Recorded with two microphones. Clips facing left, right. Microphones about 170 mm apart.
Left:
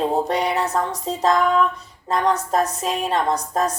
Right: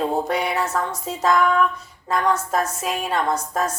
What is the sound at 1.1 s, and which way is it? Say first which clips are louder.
Music: left 1 dB; 35° left (ahead or behind).